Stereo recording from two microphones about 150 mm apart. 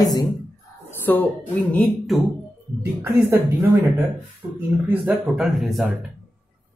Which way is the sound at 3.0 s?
15° right (ahead or behind).